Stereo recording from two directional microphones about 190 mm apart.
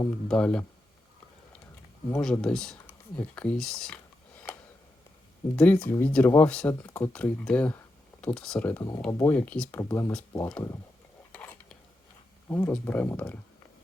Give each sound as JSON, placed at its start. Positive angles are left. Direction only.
{"t": 0.3, "sound": "speech", "side_deg": 5}
{"t": 2.0, "sound": "speech", "side_deg": 10}
{"t": 5.5, "sound": "speech", "side_deg": 5}
{"t": 11.3, "sound": "dishes", "side_deg": 10}
{"t": 12.5, "sound": "speech", "side_deg": 10}